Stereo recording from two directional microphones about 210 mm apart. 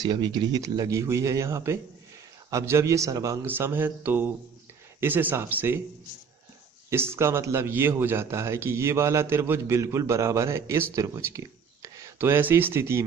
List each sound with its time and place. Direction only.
0.0 s a man's voice: 20° right (ahead or behind)
6.9 s a man's voice: 10° right (ahead or behind)